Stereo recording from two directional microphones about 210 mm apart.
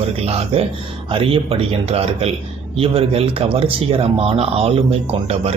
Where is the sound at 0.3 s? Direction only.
30° right (ahead or behind).